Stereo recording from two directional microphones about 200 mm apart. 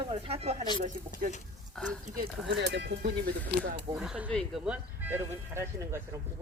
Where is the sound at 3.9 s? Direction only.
5° right (ahead or behind).